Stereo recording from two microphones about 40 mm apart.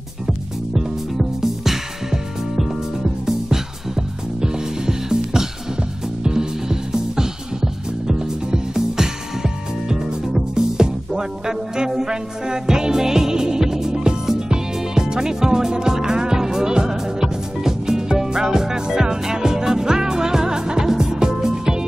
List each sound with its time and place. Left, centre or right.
0.7 s music: centre